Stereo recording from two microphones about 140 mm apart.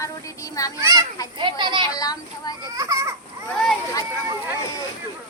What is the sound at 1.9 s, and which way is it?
Child singing, 25° left (ahead or behind).